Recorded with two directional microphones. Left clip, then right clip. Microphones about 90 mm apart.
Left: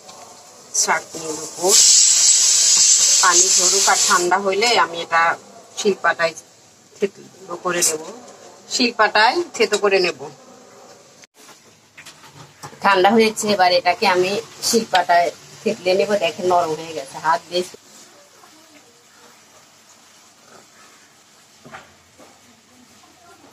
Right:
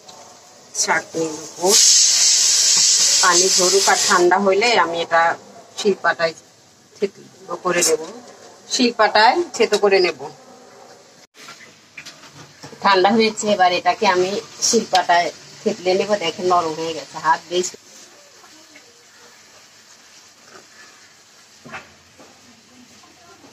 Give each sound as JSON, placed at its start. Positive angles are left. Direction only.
{"t": 0.8, "sound": "a man's voice", "side_deg": -35}
{"t": 13.0, "sound": "speech", "side_deg": 30}
{"t": 21.7, "sound": "cupboard open or close", "side_deg": 20}